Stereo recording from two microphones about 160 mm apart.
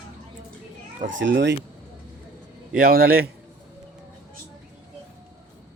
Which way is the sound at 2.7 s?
70° right (ahead or behind).